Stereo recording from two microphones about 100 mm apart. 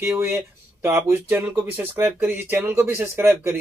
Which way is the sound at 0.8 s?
25° right (ahead or behind).